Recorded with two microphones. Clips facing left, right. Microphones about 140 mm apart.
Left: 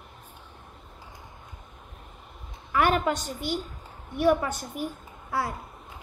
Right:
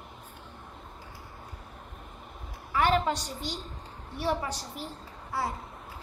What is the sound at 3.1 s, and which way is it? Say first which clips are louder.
A woman's voice: left 5 dB; 45° left (ahead or behind).